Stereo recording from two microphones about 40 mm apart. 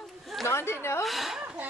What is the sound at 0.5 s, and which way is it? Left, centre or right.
Speech, left.